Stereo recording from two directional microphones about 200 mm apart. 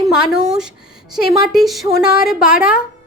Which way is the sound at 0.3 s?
5° right (ahead or behind).